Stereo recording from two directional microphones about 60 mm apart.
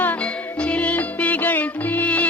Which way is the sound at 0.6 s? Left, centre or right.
Left.